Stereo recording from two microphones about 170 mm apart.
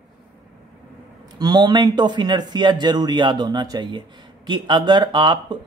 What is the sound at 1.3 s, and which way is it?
Speech, 25° right (ahead or behind).